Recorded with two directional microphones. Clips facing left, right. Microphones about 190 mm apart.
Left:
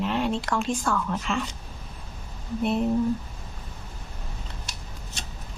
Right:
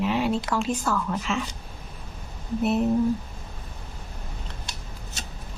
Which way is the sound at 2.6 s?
5° right (ahead or behind).